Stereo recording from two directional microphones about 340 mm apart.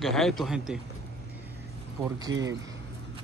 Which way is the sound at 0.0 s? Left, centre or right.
Centre.